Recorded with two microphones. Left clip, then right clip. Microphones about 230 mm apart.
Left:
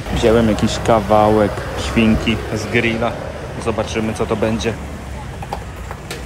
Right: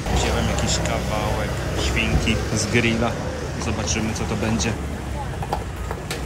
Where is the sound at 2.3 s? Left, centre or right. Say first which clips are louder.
Left 3 dB; centre.